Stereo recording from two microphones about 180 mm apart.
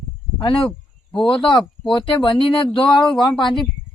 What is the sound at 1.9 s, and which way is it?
Speech, 25° left (ahead or behind).